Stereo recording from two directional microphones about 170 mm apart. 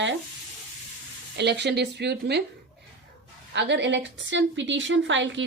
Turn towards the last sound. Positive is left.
turn(degrees=-90)